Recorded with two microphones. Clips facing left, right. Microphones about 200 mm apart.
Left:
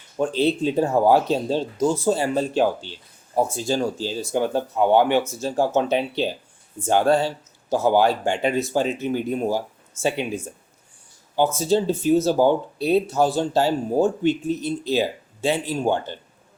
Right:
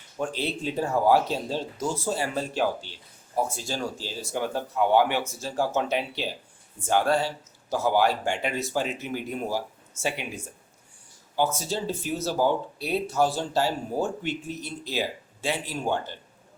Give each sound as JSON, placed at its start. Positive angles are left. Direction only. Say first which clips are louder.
{"t": 0.2, "sound": "speech", "louder": "left 9 dB", "side_deg": 25}
{"t": 11.3, "sound": "speech", "louder": "left 7 dB", "side_deg": 20}